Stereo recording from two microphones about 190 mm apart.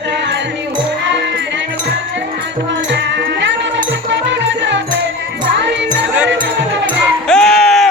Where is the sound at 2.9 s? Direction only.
70° right (ahead or behind).